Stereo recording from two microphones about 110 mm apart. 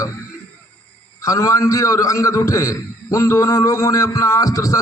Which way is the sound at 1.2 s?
30° left (ahead or behind).